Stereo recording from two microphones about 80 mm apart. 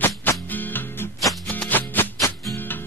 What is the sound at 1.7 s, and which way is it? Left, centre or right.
Music, left.